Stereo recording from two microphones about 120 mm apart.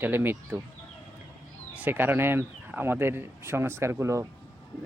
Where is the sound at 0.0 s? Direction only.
15° right (ahead or behind).